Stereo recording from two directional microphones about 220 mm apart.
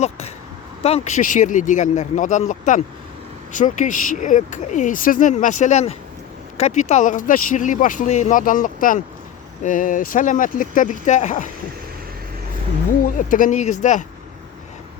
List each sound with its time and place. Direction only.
0.8 s speech: 25° left (ahead or behind)
13.0 s speech: 40° left (ahead or behind)